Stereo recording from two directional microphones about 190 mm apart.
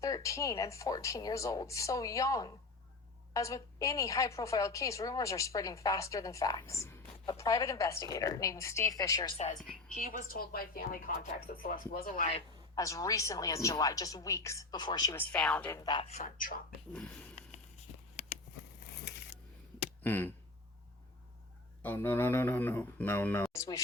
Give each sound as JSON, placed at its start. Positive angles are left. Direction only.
{"t": 0.0, "sound": "a woman's voice", "side_deg": 15}
{"t": 9.6, "sound": "a woman's voice", "side_deg": 0}
{"t": 10.0, "sound": "a woman's voice", "side_deg": 45}
{"t": 12.7, "sound": "a woman's voice", "side_deg": 15}
{"t": 15.1, "sound": "a woman's voice", "side_deg": 10}
{"t": 15.8, "sound": "speech", "side_deg": 25}
{"t": 16.9, "sound": "speech", "side_deg": 5}
{"t": 19.0, "sound": "a sound", "side_deg": 65}
{"t": 20.0, "sound": "a sound", "side_deg": 10}
{"t": 21.8, "sound": "a woman's voice", "side_deg": 10}